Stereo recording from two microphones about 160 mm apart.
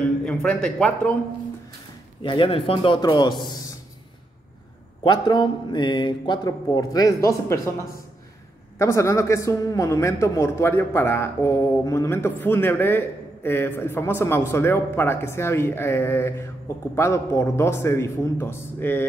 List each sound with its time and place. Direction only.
0.0 s a man's voice: 5° left (ahead or behind)
2.2 s a man's voice: 30° left (ahead or behind)
5.0 s a man's voice: 25° left (ahead or behind)
8.7 s a man's voice: 20° left (ahead or behind)